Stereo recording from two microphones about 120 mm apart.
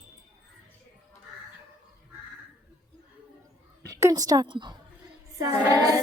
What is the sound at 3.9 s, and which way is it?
Speech, 30° right (ahead or behind).